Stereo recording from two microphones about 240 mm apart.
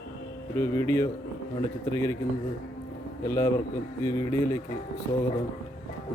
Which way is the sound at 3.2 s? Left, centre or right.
Centre.